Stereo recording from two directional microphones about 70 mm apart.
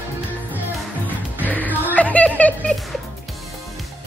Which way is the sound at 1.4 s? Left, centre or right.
Left.